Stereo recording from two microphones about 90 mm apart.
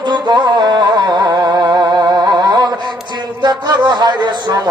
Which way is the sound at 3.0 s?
50° right (ahead or behind).